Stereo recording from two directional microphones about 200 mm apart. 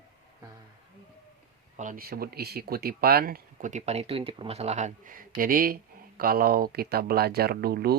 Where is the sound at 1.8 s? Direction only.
45° right (ahead or behind).